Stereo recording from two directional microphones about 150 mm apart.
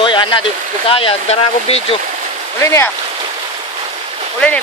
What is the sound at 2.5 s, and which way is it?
Speech, 20° left (ahead or behind).